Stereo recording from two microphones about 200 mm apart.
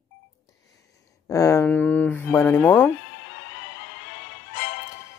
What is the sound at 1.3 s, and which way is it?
Speech, 15° left (ahead or behind).